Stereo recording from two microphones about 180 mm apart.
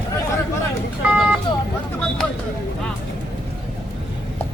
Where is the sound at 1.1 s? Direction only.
Centre (ahead or behind).